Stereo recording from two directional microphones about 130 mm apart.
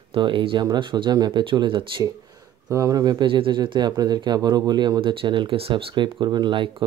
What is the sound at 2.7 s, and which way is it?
Speech, 25° right (ahead or behind).